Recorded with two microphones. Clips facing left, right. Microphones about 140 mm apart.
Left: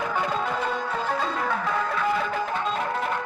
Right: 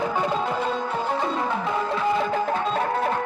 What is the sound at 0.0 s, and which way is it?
Music, 25° right (ahead or behind).